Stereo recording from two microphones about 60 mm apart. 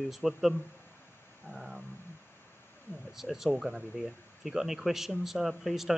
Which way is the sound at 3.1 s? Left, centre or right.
Centre.